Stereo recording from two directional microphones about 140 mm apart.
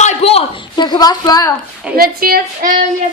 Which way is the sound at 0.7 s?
30° left (ahead or behind).